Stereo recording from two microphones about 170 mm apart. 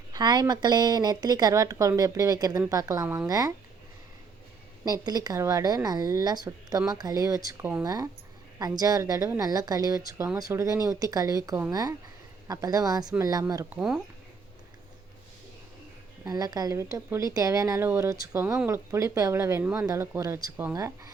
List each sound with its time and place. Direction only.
0.1 s speech: 25° right (ahead or behind)
4.9 s speech: 25° right (ahead or behind)
13.7 s speech: 5° right (ahead or behind)
16.2 s a woman's voice: 20° right (ahead or behind)